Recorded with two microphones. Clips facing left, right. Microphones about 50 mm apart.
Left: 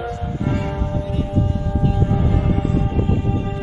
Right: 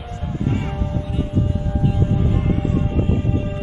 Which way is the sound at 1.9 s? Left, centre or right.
Left.